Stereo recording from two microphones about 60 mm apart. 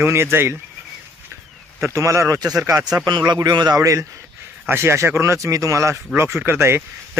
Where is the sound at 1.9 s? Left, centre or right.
Right.